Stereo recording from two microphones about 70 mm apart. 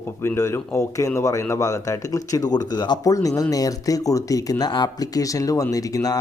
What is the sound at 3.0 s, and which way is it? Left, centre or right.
Speech, left.